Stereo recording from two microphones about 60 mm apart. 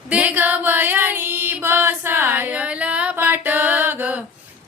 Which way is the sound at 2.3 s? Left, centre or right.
Right.